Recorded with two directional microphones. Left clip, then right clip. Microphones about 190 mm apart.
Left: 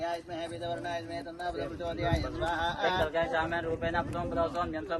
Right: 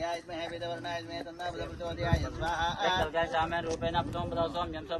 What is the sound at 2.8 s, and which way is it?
Speech, 20° right (ahead or behind).